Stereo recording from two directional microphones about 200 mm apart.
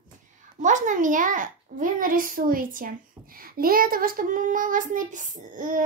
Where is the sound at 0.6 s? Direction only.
40° right (ahead or behind).